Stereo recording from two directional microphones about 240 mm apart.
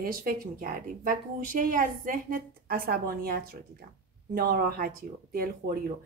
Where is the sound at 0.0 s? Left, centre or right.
Right.